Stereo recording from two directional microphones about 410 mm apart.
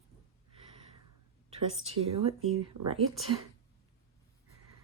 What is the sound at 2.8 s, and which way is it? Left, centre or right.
Speech, right.